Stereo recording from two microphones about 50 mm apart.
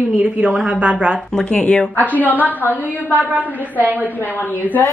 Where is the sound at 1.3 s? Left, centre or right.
Centre.